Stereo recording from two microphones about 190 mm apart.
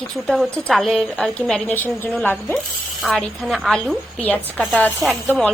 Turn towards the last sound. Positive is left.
turn(degrees=0)  # may be behind; listen again after turning